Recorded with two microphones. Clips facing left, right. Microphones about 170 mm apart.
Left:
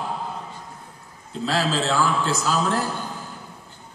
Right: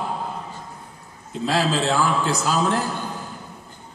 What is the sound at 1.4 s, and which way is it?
A man's voice, 15° right (ahead or behind).